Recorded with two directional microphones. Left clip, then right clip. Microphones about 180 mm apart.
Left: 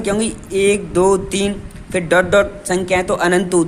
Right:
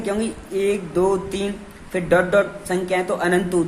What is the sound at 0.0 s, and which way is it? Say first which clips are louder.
Speech: left 5 dB; 35° left (ahead or behind).